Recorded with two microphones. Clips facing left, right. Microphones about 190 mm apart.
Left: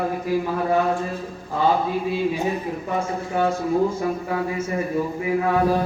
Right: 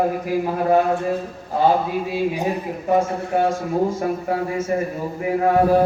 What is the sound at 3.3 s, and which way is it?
A man's voice, 50° right (ahead or behind).